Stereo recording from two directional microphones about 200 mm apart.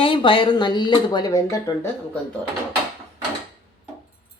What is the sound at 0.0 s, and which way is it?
Speech, 25° left (ahead or behind).